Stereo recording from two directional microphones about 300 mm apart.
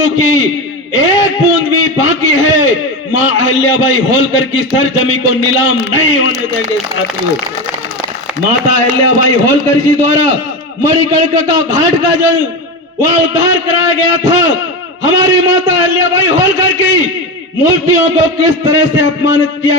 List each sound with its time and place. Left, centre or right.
0.2 s a man's voice: left
8.6 s a man's voice: left
11.7 s a man's voice: left